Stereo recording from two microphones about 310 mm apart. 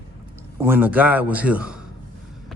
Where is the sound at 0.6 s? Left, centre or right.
Centre.